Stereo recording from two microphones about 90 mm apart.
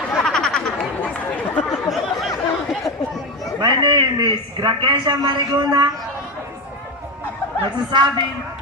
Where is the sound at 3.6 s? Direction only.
55° right (ahead or behind).